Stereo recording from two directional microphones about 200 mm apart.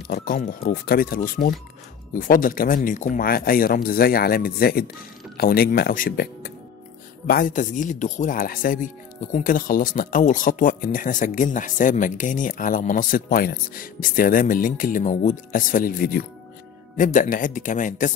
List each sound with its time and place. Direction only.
0.1 s speech: 45° left (ahead or behind)